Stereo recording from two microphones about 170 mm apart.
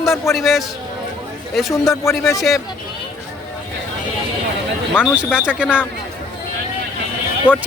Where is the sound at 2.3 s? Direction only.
Centre (ahead or behind).